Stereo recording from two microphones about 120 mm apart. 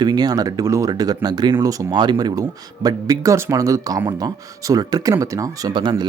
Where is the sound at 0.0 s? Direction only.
35° right (ahead or behind).